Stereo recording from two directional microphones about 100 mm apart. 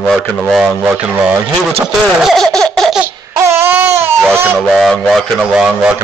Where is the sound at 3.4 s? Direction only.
25° right (ahead or behind).